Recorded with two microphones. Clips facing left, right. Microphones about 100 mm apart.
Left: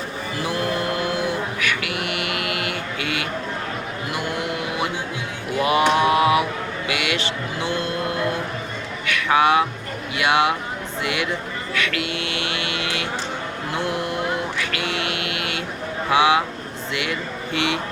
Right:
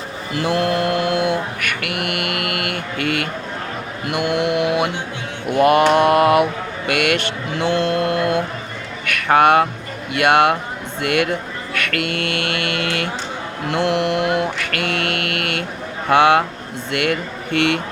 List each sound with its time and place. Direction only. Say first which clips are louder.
0.4 s mantra: right 6 dB; 65° right (ahead or behind)
9.0 s a sound: right 4 dB; 55° right (ahead or behind)
10.2 s speech: right 5 dB; 55° right (ahead or behind)
13.7 s mantra: right 7 dB; 70° right (ahead or behind)
16.0 s speech: right 4 dB; 55° right (ahead or behind)